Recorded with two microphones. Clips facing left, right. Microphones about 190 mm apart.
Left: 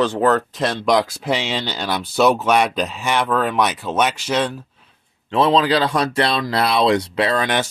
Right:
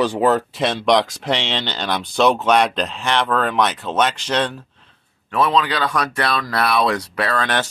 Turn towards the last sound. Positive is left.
turn(degrees=15)  # may be behind; listen again after turning